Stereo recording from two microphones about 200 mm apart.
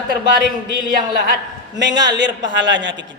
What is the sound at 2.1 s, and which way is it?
Speech, 60° right (ahead or behind).